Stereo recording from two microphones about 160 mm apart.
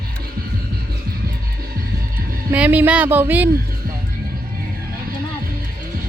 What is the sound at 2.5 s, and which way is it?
Speech, 10° right (ahead or behind).